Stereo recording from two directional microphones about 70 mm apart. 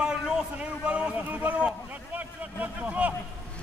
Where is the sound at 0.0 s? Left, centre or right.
Centre.